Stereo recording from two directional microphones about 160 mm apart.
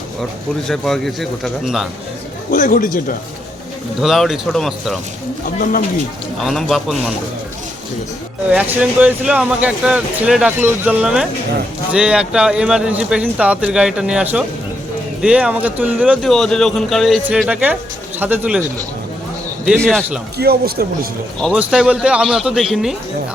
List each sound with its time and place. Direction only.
0.7 s speech: centre (ahead or behind)
2.5 s speech: 55° left (ahead or behind)
4.0 s speech: centre (ahead or behind)
5.5 s speech: 55° left (ahead or behind)
6.4 s speech: centre (ahead or behind)
8.4 s speech: 10° right (ahead or behind)
16.2 s speech: 5° left (ahead or behind)
19.6 s speech: 5° left (ahead or behind)
20.4 s speech: 75° right (ahead or behind)
21.4 s speech: 5° right (ahead or behind)